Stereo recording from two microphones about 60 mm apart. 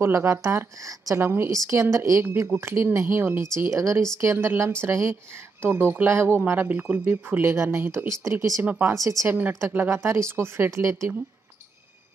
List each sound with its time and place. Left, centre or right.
0.0 s speech: right
1.2 s speech: right
2.3 s speech: right
3.5 s speech: right
7.5 s speech: right
8.3 s speech: right
9.5 s speech: right